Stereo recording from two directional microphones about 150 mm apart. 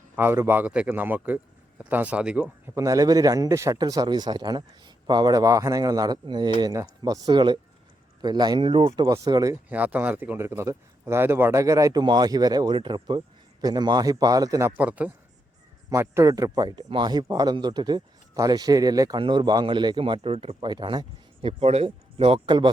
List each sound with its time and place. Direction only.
0.2 s a man's voice: 15° right (ahead or behind)
2.7 s speech: 20° right (ahead or behind)
9.0 s speech: 25° right (ahead or behind)
9.6 s speech: 10° right (ahead or behind)
14.8 s a man's voice: 10° right (ahead or behind); by 21.5 s 30° right (ahead or behind)
21.6 s speech: 45° right (ahead or behind)